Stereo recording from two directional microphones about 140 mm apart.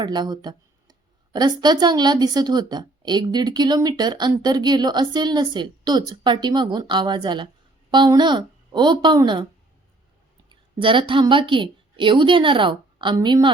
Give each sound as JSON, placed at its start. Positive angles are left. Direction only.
{"t": 0.0, "sound": "a woman's voice", "side_deg": -30}
{"t": 10.5, "sound": "a woman's voice", "side_deg": -35}